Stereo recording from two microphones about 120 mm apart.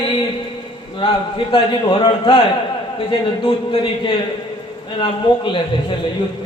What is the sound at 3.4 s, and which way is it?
A man's voice, 45° left (ahead or behind).